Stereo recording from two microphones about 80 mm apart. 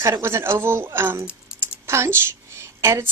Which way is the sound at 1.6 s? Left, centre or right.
Right.